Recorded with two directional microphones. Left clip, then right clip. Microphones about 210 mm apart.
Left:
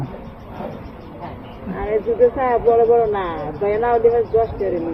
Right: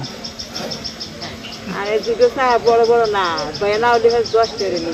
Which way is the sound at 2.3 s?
15° right (ahead or behind).